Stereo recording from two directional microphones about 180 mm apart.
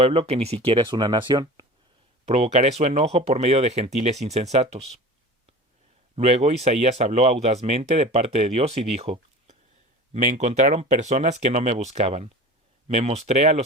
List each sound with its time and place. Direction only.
0.0 s speech: 35° right (ahead or behind)
2.2 s speech: 35° right (ahead or behind)
6.1 s speech: 35° right (ahead or behind)